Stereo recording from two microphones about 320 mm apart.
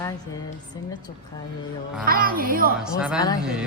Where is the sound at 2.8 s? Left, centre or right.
Centre.